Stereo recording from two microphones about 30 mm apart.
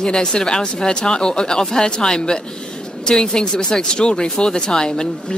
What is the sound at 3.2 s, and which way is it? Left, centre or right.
Speech, left.